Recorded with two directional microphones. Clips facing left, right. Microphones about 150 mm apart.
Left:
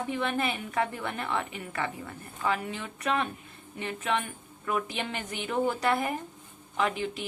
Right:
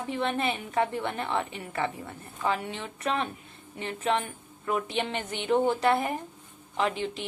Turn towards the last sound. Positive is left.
turn(degrees=-30)  # may be behind; listen again after turning